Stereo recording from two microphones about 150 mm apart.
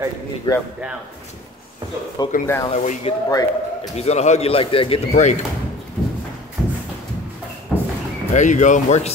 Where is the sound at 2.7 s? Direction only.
50° left (ahead or behind).